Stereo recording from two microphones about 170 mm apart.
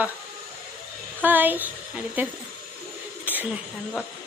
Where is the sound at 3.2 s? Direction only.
10° right (ahead or behind).